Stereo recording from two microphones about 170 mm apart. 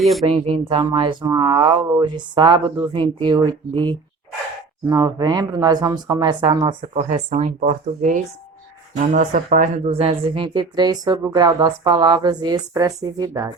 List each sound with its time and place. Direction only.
0.0 s speech: centre (ahead or behind)
0.3 s speech: 35° right (ahead or behind)
7.1 s speech: 40° right (ahead or behind); by 13.5 s 20° right (ahead or behind)